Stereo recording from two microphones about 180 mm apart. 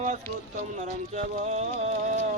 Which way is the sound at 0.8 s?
40° right (ahead or behind).